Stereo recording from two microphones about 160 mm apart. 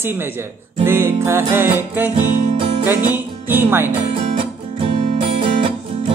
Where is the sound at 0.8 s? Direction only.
15° right (ahead or behind).